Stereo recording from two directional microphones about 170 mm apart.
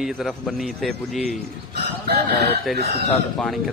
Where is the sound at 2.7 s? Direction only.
65° right (ahead or behind).